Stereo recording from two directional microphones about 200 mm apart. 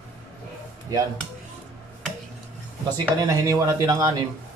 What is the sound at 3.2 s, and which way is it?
Speech, 15° right (ahead or behind).